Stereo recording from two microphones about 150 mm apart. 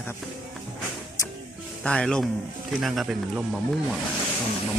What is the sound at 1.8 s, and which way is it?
Speech, 5° left (ahead or behind).